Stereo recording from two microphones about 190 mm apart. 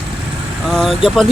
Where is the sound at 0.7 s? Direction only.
Centre (ahead or behind).